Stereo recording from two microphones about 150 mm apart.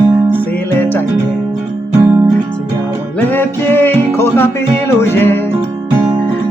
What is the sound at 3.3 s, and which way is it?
Music, 15° left (ahead or behind).